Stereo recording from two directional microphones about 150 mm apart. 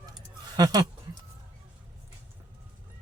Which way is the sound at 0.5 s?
25° right (ahead or behind).